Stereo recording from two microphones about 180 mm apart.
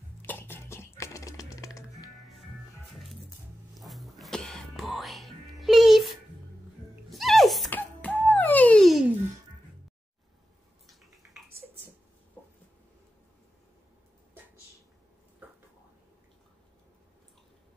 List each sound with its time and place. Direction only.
0.2 s music: 10° left (ahead or behind)
3.7 s music: centre (ahead or behind)
7.1 s a sound: centre (ahead or behind)
10.9 s drip: centre (ahead or behind)